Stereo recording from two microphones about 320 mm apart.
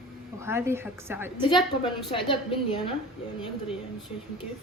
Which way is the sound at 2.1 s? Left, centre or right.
Centre.